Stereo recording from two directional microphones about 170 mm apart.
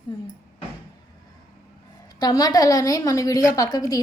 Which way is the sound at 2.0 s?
25° left (ahead or behind).